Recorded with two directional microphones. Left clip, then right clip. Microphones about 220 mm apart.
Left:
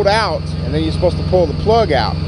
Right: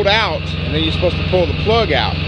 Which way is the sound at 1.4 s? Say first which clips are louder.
Left 2 dB; 5° left (ahead or behind).